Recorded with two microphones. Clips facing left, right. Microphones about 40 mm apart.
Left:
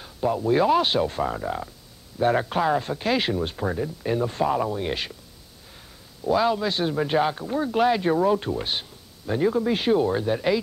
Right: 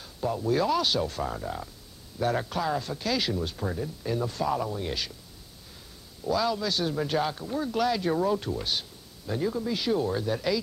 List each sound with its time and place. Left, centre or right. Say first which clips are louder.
0.0 s a man's voice: left 5 dB; left
6.2 s a man's voice: left 5 dB; left